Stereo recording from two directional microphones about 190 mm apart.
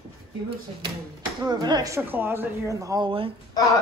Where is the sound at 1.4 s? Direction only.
20° right (ahead or behind).